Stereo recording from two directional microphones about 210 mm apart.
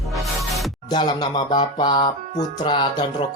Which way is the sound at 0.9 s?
20° left (ahead or behind).